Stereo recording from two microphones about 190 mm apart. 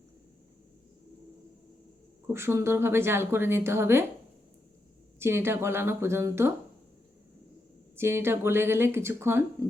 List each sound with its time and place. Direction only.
2.3 s speech: 15° right (ahead or behind)
5.2 s speech: 15° right (ahead or behind)
7.9 s speech: 10° right (ahead or behind)